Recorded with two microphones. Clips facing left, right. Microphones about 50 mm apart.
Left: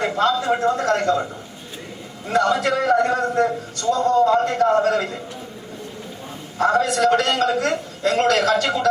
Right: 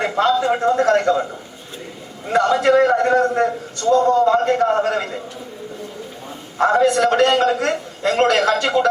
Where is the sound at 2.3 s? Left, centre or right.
Right.